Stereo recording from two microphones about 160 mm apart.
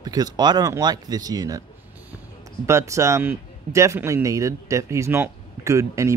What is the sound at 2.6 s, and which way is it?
A man's voice, 20° right (ahead or behind).